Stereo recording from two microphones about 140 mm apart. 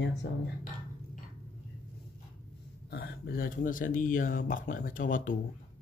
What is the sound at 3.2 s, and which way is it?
Speech, 85° left.